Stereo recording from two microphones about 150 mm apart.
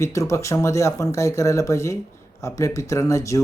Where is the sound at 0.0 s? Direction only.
20° left (ahead or behind).